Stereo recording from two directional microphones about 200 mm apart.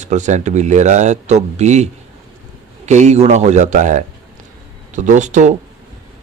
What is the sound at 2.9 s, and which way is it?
Speech, 35° right (ahead or behind).